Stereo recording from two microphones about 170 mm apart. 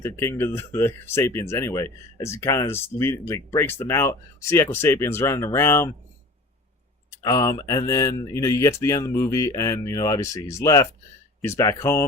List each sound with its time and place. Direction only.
0.0 s speech: 15° left (ahead or behind)
7.2 s speech: 20° left (ahead or behind)